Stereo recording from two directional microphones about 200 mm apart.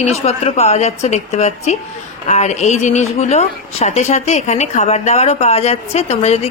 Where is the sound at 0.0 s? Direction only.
30° left (ahead or behind).